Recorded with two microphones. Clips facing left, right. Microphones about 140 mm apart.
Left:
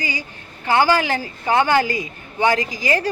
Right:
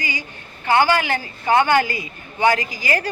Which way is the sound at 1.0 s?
30° left (ahead or behind).